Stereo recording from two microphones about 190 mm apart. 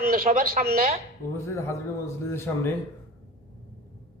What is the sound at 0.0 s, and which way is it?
Speech, 50° right (ahead or behind).